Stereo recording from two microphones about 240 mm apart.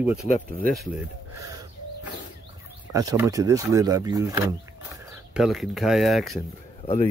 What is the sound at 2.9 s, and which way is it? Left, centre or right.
Speech, centre.